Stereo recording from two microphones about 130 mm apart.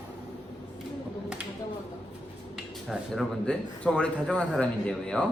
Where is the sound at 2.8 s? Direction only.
5° right (ahead or behind).